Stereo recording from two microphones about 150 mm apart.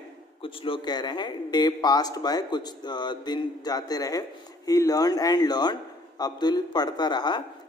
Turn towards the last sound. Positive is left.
turn(degrees=30)  # may be behind; listen again after turning